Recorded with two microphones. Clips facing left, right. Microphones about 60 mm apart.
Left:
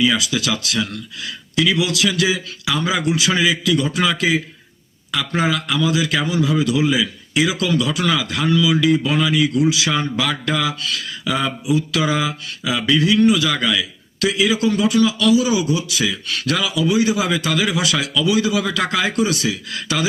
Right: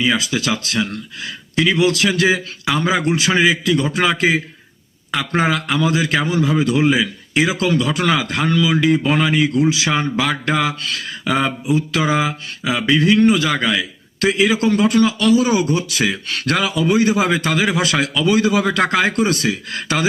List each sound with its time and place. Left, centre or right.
0.0 s a man's voice: right
13.1 s a man's voice: right